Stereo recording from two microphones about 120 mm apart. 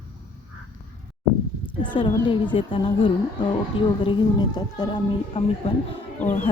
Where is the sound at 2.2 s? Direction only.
40° left (ahead or behind).